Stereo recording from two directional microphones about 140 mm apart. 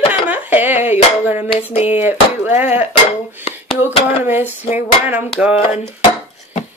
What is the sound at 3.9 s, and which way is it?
Speech, 45° left (ahead or behind).